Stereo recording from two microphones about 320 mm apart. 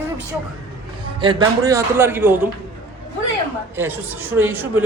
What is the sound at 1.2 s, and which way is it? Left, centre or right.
A man's voice, centre.